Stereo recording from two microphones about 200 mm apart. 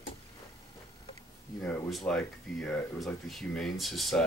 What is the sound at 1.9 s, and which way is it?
Speech, 5° left (ahead or behind).